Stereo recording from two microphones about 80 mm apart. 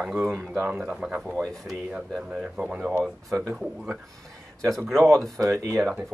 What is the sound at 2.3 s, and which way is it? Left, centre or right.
Speech, centre.